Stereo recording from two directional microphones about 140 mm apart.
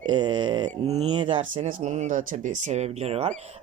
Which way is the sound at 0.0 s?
30° right (ahead or behind).